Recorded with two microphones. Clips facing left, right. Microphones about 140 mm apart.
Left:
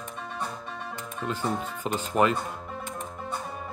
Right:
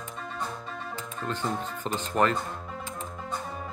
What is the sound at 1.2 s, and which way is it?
Speech, 10° left (ahead or behind).